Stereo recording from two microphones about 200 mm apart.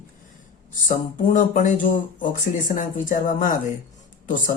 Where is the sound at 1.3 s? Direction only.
40° left (ahead or behind).